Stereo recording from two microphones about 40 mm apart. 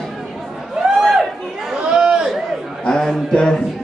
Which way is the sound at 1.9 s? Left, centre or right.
Right.